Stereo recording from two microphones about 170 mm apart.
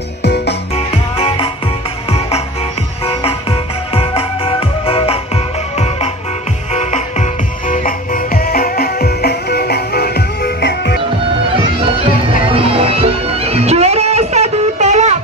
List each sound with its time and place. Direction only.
0.2 s music: 80° left
0.7 s music: 35° left (ahead or behind); by 11.0 s 85° left
12.4 s music: 35° right (ahead or behind)